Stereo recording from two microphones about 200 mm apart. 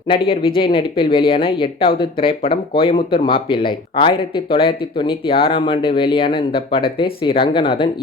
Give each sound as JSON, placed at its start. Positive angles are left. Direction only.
{"t": 0.1, "sound": "speech", "side_deg": 25}